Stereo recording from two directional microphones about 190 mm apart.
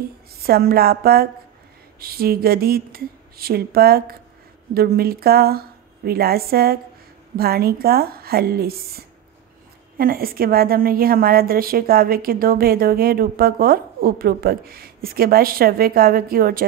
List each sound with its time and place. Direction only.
0.4 s a woman's voice: 55° right (ahead or behind)